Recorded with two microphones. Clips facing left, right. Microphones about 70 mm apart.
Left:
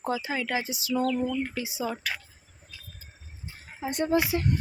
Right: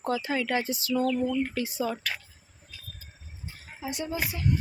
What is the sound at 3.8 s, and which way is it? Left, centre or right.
Speech, left.